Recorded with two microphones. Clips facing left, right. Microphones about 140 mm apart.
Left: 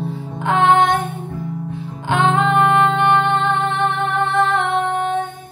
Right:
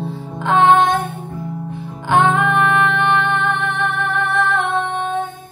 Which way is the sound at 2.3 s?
20° left (ahead or behind).